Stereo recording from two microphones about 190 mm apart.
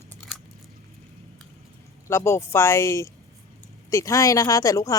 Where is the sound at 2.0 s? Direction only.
15° left (ahead or behind).